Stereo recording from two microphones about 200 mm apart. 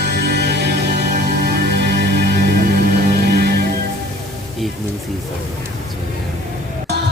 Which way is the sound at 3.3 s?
50° right (ahead or behind).